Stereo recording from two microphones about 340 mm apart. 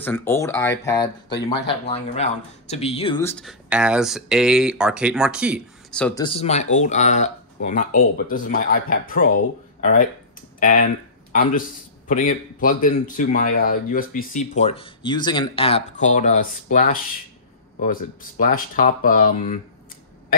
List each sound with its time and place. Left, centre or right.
0.0 s speech: centre
6.2 s speech: centre
12.1 s speech: left